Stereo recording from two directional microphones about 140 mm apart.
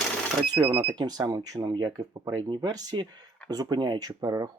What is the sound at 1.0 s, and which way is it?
Speech, 30° right (ahead or behind).